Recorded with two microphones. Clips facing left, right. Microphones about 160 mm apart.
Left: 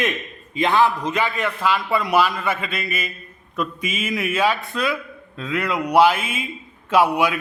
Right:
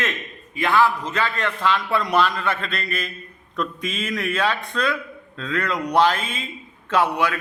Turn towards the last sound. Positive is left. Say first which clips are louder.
# left 3 dB
turn(degrees=10)  # may be behind; listen again after turning